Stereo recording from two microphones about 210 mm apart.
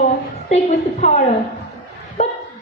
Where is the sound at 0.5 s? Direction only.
35° left (ahead or behind).